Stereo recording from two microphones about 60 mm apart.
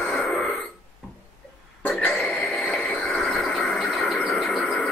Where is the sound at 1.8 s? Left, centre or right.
Left.